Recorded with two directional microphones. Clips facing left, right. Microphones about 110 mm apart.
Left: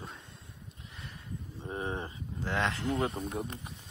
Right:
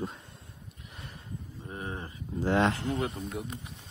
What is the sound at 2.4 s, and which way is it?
Speech, 40° right (ahead or behind).